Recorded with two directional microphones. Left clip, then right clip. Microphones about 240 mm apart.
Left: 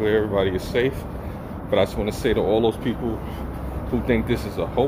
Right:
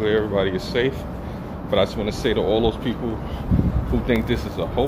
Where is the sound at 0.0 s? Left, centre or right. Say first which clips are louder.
Even; centre.